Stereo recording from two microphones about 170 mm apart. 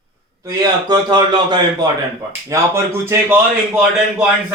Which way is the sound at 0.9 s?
25° right (ahead or behind).